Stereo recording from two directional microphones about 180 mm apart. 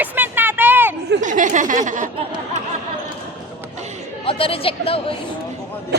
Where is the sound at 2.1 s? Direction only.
30° right (ahead or behind).